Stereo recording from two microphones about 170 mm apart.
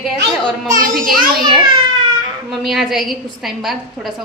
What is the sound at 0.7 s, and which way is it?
Speech, 50° right (ahead or behind).